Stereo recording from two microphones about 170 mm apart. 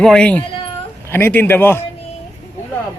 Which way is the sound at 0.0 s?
5° left (ahead or behind).